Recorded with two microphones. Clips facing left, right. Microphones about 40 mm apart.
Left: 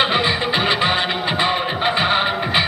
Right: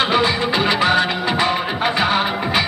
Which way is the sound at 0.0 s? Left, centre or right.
Left.